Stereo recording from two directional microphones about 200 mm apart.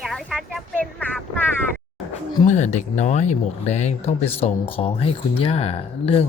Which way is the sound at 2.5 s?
35° left (ahead or behind).